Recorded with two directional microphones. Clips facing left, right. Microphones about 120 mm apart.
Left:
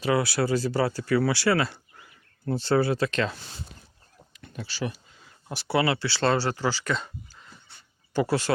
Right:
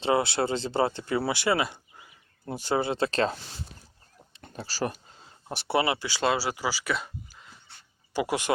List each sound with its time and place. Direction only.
0.0 s speech: 25° right (ahead or behind)
4.4 s speech: 35° right (ahead or behind); by 8.5 s 15° right (ahead or behind)